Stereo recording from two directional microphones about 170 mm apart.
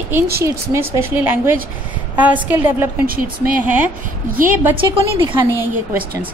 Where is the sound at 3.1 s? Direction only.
55° right (ahead or behind).